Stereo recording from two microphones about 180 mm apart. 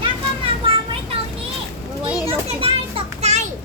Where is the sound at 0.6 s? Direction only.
30° right (ahead or behind).